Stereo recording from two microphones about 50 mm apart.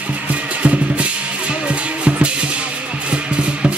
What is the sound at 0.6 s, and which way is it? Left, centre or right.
Music, right.